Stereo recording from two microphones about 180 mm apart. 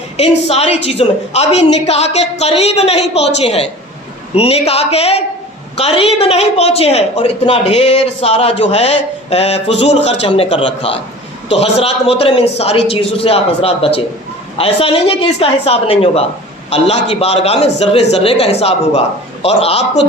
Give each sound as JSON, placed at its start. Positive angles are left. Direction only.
{"t": 0.4, "sound": "a woman's voice", "side_deg": 35}
{"t": 11.6, "sound": "a woman's voice", "side_deg": 35}